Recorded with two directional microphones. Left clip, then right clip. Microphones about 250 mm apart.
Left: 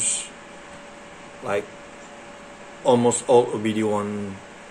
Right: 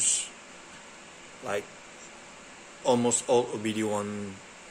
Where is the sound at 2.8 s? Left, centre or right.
Centre.